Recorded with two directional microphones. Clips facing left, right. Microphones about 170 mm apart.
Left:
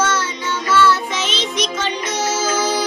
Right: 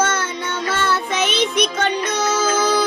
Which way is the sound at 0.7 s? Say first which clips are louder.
Left 6 dB; 55° right (ahead or behind).